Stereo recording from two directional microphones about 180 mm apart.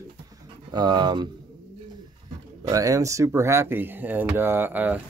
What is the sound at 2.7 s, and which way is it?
Speech, 20° right (ahead or behind).